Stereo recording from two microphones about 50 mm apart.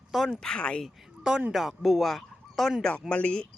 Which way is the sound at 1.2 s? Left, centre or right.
Centre.